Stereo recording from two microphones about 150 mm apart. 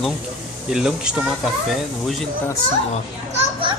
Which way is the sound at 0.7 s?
5° right (ahead or behind).